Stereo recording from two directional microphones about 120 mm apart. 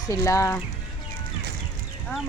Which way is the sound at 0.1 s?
25° left (ahead or behind).